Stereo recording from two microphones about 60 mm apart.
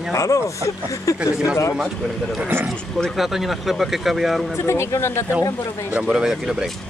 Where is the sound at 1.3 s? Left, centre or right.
Centre.